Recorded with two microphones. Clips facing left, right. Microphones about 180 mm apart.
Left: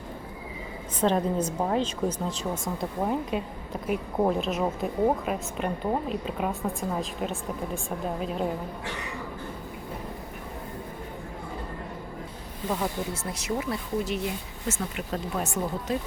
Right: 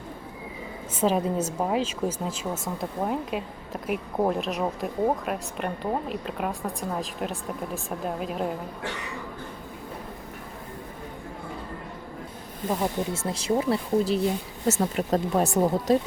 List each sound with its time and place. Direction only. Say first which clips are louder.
0.9 s a woman's voice: even; 5° right (ahead or behind)
12.7 s speech: right 3 dB; 25° right (ahead or behind); by 16.0 s 40° right (ahead or behind)